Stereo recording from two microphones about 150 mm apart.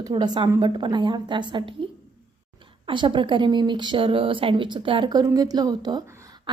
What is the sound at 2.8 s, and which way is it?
A woman's voice, 30° right (ahead or behind).